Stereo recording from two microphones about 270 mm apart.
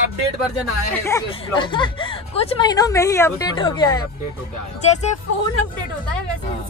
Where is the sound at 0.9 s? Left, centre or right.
Centre.